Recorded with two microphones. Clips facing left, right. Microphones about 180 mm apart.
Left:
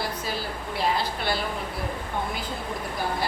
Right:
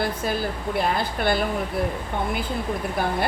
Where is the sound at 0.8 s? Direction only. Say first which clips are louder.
Right 2 dB; 50° right (ahead or behind).